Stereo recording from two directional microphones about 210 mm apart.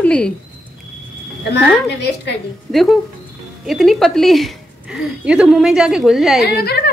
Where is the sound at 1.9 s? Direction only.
55° left (ahead or behind).